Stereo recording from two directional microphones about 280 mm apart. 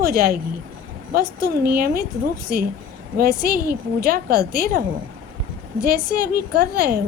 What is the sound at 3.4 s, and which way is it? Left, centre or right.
A woman's voice, right.